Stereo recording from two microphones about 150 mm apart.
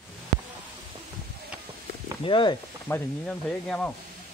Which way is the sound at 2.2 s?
35° left (ahead or behind).